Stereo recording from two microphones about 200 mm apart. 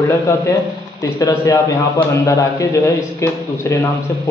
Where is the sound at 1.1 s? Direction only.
15° left (ahead or behind).